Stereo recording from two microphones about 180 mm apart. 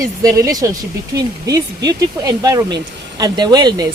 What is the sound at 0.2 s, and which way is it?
Speech, 20° right (ahead or behind).